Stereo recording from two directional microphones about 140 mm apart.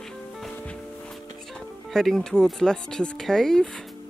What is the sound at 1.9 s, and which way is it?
Speech, centre (ahead or behind).